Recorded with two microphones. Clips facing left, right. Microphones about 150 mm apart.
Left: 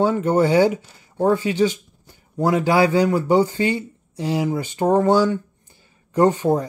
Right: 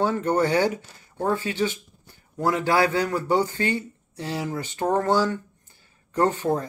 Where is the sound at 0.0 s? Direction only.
10° left (ahead or behind).